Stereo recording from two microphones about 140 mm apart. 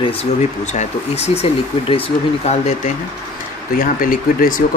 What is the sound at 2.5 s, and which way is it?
Speech, 55° left (ahead or behind).